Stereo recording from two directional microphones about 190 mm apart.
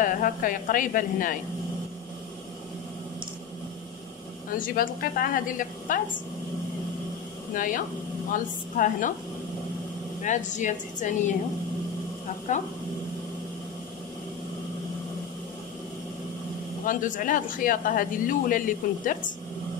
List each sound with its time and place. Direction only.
0.0 s a man's voice: 45° left (ahead or behind)
4.6 s a man's voice: 50° left (ahead or behind)
7.5 s a man's voice: 45° left (ahead or behind)
10.2 s speech: 40° left (ahead or behind)
12.5 s speech: 40° left (ahead or behind)
16.8 s a man's voice: 45° left (ahead or behind)